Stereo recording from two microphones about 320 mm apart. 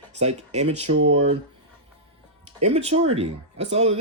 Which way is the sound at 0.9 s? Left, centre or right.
Right.